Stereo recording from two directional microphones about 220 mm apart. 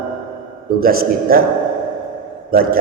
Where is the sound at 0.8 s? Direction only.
40° right (ahead or behind).